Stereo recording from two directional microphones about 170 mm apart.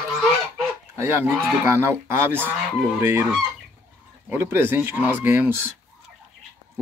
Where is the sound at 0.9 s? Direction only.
15° right (ahead or behind).